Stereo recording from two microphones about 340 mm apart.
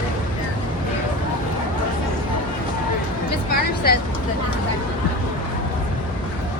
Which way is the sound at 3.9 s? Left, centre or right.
Left.